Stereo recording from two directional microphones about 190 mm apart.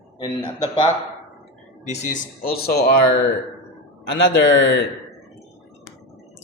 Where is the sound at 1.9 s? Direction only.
40° left (ahead or behind); by 2.8 s 55° left (ahead or behind).